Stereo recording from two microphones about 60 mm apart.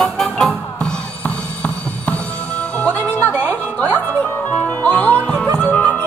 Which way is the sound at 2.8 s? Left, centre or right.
Left.